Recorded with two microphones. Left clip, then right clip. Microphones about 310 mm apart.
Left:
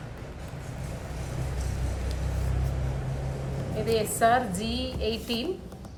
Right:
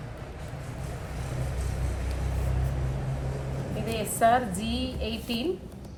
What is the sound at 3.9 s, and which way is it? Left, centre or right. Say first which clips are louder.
A woman's voice: even; centre.